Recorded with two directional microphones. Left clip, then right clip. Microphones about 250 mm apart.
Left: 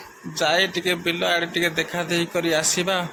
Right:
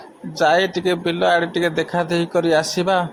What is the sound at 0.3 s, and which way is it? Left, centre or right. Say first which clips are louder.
A man's voice: right 4 dB; centre.